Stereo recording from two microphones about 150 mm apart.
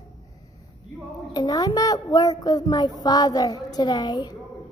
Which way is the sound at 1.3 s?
25° left (ahead or behind).